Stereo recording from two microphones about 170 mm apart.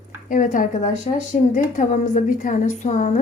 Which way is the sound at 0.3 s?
50° left (ahead or behind).